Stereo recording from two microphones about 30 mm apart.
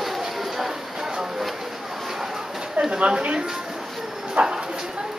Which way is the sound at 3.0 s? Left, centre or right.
Right.